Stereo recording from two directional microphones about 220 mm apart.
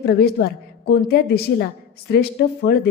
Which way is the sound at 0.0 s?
50° left (ahead or behind).